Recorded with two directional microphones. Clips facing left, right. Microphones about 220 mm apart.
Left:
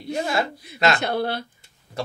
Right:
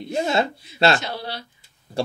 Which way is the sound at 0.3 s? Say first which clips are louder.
Right 3 dB; 30° right (ahead or behind).